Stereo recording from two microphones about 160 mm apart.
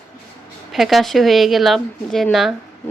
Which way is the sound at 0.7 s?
Centre (ahead or behind).